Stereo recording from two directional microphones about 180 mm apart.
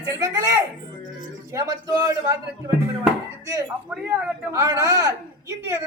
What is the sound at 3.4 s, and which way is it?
A woman's voice, 20° right (ahead or behind).